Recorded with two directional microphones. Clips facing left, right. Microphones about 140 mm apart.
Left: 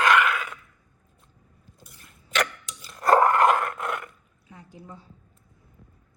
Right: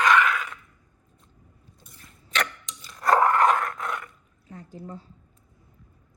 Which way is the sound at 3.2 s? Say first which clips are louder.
Left 1 dB; centre (ahead or behind).